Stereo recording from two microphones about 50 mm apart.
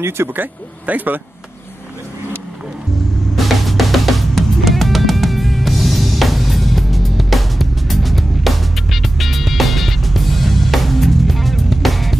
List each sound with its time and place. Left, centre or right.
0.3 s speech: right
3.3 s music: centre